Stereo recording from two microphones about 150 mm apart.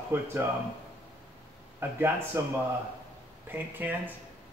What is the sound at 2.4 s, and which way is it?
A man's voice, 20° right (ahead or behind).